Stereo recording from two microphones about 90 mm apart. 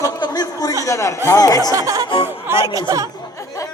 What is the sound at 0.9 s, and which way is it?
Speech, 35° left (ahead or behind).